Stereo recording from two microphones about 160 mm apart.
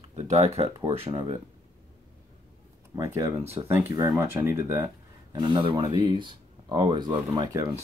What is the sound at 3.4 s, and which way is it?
Speech, 40° right (ahead or behind).